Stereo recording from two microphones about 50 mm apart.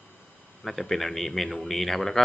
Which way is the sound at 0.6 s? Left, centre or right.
Centre.